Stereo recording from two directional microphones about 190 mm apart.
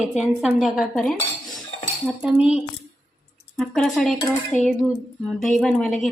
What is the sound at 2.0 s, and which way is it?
Cutlery, 10° right (ahead or behind).